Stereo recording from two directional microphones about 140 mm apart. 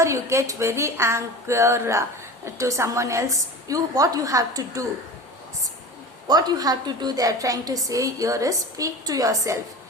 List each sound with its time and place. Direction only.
0.0 s a woman's voice: 20° right (ahead or behind)
6.2 s a woman's voice: 30° right (ahead or behind)